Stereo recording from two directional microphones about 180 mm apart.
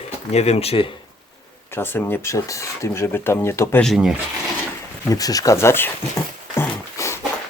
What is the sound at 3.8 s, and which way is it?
Speech, centre (ahead or behind).